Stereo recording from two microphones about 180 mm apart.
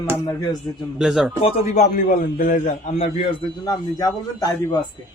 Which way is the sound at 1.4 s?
40° left (ahead or behind).